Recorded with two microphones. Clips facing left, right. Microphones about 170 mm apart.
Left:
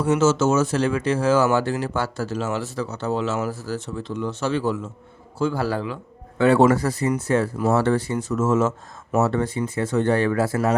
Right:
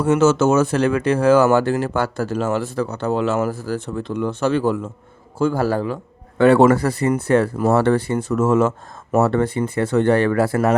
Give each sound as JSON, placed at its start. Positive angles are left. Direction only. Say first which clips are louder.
{"t": 0.0, "sound": "a man's voice", "louder": "right 3 dB", "side_deg": -60}
{"t": 6.4, "sound": "speech", "louder": "right 4 dB", "side_deg": -60}